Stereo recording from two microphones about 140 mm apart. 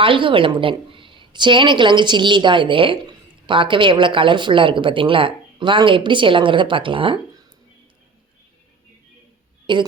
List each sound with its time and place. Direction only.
0.0 s a woman's voice: 35° right (ahead or behind)
9.7 s a woman's voice: 35° right (ahead or behind)